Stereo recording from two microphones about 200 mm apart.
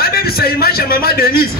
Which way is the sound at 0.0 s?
50° left (ahead or behind).